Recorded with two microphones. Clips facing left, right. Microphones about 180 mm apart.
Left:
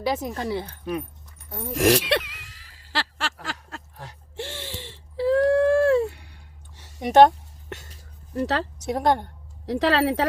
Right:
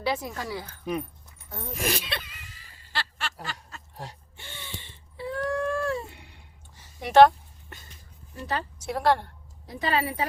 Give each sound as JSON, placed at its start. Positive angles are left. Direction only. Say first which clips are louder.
{"t": 0.0, "sound": "speech", "louder": "left 3 dB", "side_deg": 15}
{"t": 0.3, "sound": "speech", "louder": "left 6 dB", "side_deg": 30}
{"t": 1.5, "sound": "speech", "louder": "left 4 dB", "side_deg": 15}
{"t": 1.7, "sound": "a sound", "louder": "left 11 dB", "side_deg": 80}
{"t": 7.1, "sound": "a woman's voice", "louder": "left 1 dB", "side_deg": 20}
{"t": 7.7, "sound": "a sound", "louder": "left 11 dB", "side_deg": 80}
{"t": 8.3, "sound": "speech", "louder": "left 7 dB", "side_deg": 75}
{"t": 8.8, "sound": "a woman's voice", "louder": "left 1 dB", "side_deg": 20}
{"t": 9.6, "sound": "speech", "louder": "left 7 dB", "side_deg": 80}